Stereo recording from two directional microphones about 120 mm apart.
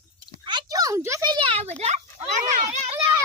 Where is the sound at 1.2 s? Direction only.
40° right (ahead or behind).